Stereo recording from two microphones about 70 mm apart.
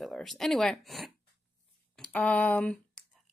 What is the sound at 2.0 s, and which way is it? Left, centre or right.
Speech, centre.